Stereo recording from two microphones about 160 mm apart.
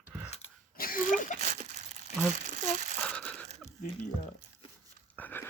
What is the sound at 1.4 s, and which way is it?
Crumpling, 45° right (ahead or behind).